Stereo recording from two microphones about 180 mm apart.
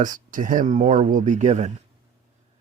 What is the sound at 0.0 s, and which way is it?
Speech, 45° right (ahead or behind).